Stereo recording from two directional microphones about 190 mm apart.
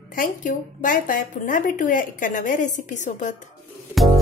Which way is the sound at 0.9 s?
45° left (ahead or behind).